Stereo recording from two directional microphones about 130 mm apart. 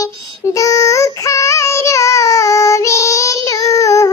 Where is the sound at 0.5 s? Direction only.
25° left (ahead or behind).